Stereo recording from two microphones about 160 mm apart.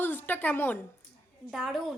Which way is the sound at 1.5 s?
Centre (ahead or behind).